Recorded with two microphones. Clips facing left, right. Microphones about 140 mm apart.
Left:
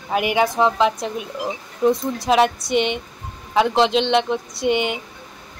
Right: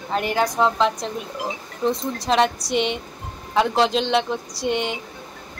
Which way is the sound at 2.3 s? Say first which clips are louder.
Left 3 dB; 5° left (ahead or behind).